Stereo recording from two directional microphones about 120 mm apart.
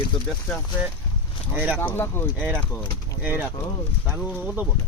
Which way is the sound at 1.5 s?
20° right (ahead or behind).